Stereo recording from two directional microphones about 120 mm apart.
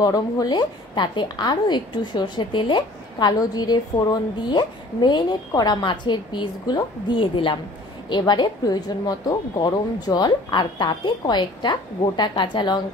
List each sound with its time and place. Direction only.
0.0 s a woman's voice: 30° left (ahead or behind)